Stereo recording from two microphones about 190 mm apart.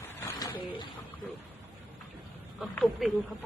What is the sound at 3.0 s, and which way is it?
Speech, centre (ahead or behind).